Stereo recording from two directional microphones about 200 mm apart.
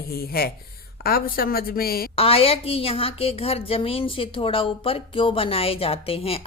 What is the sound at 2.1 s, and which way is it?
A woman's voice, 30° left (ahead or behind).